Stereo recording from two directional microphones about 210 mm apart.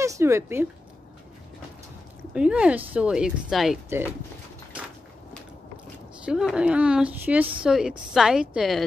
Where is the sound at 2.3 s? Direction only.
5° right (ahead or behind).